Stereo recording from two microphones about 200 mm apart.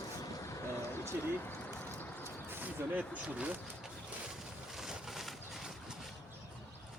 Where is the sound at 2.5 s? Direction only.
10° right (ahead or behind).